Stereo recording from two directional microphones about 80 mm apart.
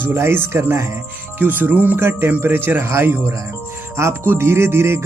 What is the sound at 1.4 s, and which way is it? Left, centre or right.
Speech, right.